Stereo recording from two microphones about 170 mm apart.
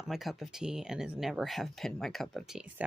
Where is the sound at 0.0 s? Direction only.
Centre (ahead or behind).